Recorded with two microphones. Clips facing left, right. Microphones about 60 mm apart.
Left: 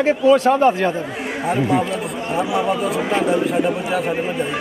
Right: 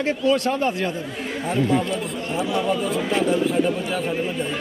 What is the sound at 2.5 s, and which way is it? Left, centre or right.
A man's voice, centre.